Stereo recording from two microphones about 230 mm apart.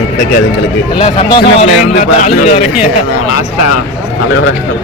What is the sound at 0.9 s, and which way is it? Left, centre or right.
A man's voice, left.